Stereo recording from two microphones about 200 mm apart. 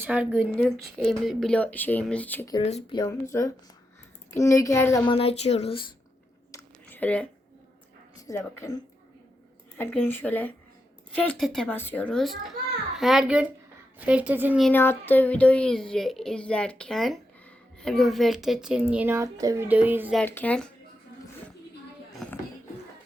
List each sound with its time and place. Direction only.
0.0 s a child's voice: 5° right (ahead or behind); by 2.6 s 10° left (ahead or behind)
2.6 s speech: 35° left (ahead or behind)
2.9 s speech: 20° left (ahead or behind)
4.3 s speech: 15° left (ahead or behind)
5.1 s speech: 30° left (ahead or behind)
6.5 s a sound: 10° left (ahead or behind)
8.1 s a child's voice: 15° left (ahead or behind); by 14.7 s 5° right (ahead or behind)
14.7 s speech: 10° left (ahead or behind); by 20.1 s 10° right (ahead or behind)
20.1 s speech: 10° left (ahead or behind)
22.2 s a sound: centre (ahead or behind)